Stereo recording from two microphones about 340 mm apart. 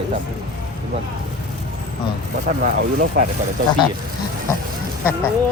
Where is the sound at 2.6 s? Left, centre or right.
Right.